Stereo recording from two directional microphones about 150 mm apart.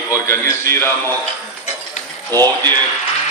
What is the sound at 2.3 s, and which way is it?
Speech, 25° right (ahead or behind).